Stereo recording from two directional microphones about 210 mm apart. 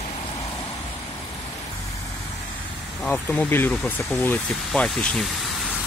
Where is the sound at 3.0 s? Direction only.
10° left (ahead or behind).